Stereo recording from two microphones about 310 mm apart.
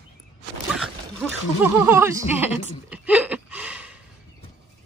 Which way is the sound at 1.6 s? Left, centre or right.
Centre.